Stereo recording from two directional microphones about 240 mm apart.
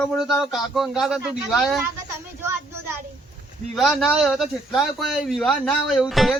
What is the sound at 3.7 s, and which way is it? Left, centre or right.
Speech, centre.